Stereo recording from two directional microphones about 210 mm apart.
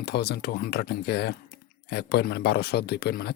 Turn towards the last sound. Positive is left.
turn(degrees=50)  # may be behind; listen again after turning